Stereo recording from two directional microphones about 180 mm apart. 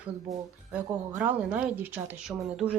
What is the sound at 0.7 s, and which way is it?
Speech, 5° right (ahead or behind).